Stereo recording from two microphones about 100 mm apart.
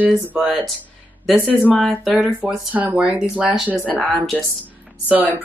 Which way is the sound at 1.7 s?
Centre (ahead or behind).